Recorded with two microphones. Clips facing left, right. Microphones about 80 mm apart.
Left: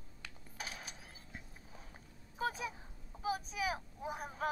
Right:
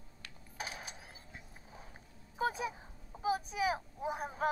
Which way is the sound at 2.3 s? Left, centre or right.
Right.